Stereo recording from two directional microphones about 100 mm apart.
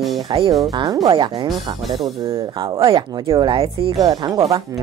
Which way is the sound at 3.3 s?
45° right (ahead or behind).